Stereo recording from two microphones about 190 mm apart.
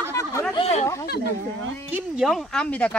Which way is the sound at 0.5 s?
30° left (ahead or behind).